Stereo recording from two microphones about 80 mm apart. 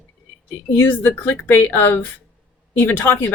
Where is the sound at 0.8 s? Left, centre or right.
Left.